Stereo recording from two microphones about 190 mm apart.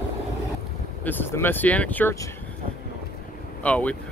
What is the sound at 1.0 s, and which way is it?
Speech, 10° left (ahead or behind).